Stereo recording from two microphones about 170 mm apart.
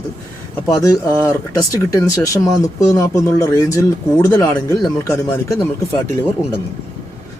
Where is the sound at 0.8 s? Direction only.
15° left (ahead or behind).